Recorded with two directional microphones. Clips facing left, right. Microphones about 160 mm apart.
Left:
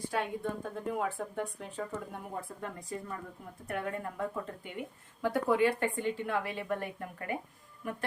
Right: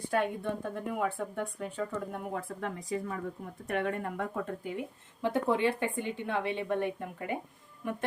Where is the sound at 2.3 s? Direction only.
85° right.